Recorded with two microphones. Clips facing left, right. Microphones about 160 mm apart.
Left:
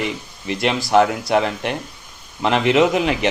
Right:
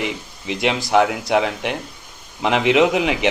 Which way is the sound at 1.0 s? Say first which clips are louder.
Left 1 dB; 5° right (ahead or behind).